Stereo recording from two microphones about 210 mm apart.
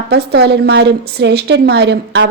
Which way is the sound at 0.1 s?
50° right (ahead or behind).